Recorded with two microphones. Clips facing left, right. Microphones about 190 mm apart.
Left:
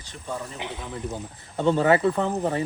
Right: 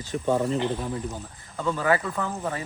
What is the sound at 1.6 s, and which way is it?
Speech, 25° left (ahead or behind).